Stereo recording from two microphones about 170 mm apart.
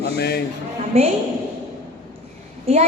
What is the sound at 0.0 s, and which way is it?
Speech, 75° left (ahead or behind).